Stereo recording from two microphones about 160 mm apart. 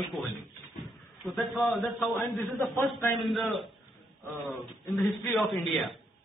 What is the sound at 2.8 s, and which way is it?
Speech, 15° left (ahead or behind).